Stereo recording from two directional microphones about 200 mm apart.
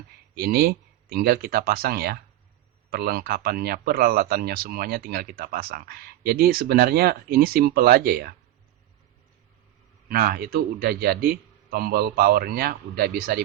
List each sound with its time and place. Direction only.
0.3 s speech: 50° right (ahead or behind)
10.1 s speech: 50° right (ahead or behind)